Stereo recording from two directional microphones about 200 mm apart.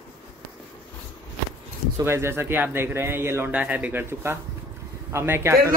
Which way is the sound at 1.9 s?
10° right (ahead or behind).